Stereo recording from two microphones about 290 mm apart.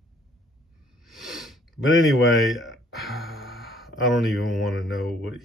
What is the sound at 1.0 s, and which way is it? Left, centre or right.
Speech, centre.